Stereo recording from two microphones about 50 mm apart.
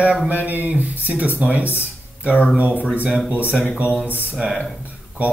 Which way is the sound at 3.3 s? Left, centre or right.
Right.